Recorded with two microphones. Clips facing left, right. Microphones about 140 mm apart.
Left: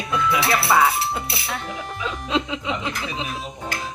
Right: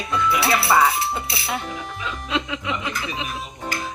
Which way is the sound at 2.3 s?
25° left (ahead or behind).